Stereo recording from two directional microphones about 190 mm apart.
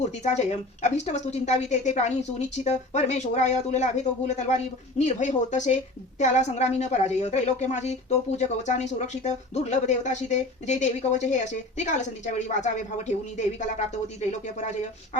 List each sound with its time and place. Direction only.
0.2 s speech: 35° left (ahead or behind)